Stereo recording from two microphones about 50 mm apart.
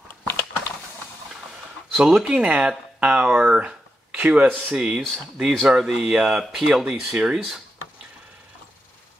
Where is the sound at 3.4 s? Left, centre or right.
Right.